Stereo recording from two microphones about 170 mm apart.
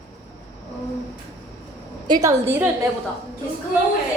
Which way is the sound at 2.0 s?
25° right (ahead or behind).